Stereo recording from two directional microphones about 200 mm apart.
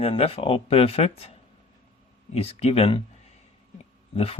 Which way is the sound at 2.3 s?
30° left (ahead or behind).